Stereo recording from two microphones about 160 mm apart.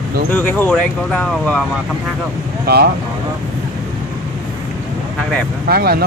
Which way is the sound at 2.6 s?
80° right.